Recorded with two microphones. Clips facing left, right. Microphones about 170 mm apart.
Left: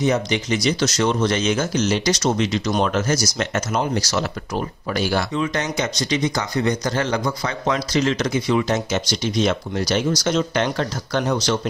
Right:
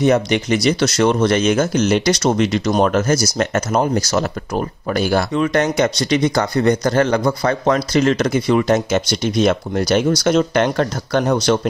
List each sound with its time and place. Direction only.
0.0 s speech: 60° right (ahead or behind)